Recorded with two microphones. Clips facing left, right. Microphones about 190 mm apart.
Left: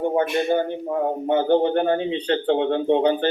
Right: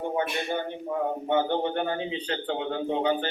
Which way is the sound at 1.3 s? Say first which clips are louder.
Left 8 dB; 35° left (ahead or behind).